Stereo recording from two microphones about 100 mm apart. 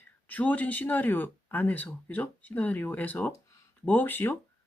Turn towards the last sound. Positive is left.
turn(degrees=20)  # may be behind; listen again after turning